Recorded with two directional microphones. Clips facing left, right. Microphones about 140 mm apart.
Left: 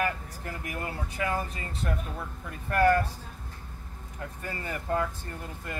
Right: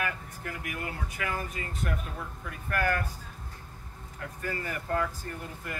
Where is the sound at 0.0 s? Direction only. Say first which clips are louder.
Left 4 dB; 30° left (ahead or behind).